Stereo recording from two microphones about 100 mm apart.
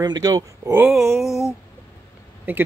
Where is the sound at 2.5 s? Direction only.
20° right (ahead or behind).